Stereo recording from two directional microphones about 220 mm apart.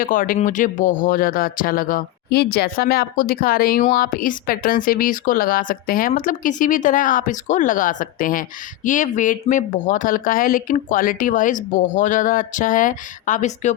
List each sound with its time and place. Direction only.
0.0 s speech: 40° left (ahead or behind)